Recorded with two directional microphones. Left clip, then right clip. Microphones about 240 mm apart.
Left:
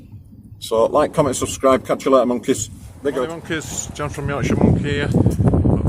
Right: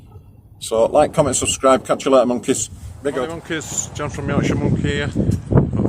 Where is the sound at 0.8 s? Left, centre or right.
Centre.